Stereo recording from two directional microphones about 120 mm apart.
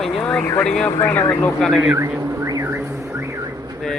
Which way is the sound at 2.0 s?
25° right (ahead or behind).